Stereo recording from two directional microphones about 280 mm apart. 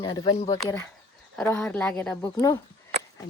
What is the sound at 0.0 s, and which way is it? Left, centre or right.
A woman's voice, centre.